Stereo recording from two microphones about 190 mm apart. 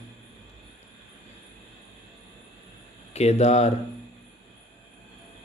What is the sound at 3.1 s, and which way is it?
Speech, 35° left (ahead or behind).